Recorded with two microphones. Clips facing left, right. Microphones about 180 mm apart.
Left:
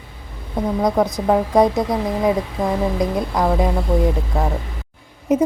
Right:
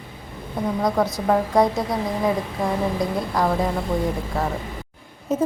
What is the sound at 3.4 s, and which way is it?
Speech, 20° left (ahead or behind).